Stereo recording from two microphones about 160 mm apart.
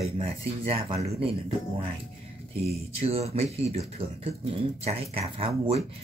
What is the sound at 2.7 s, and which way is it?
Speech, 40° right (ahead or behind).